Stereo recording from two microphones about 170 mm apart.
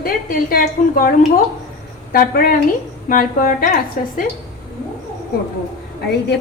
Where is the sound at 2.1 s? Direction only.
60° left (ahead or behind).